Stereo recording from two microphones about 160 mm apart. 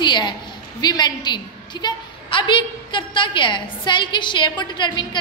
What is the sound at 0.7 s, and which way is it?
A woman's voice, 25° left (ahead or behind).